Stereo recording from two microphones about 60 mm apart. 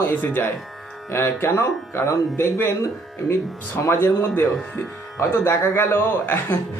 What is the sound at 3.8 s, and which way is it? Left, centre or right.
A man's voice, left.